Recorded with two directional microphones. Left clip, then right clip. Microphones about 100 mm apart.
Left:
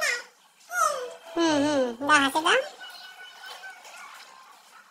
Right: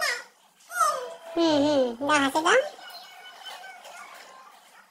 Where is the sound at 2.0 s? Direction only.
40° right (ahead or behind).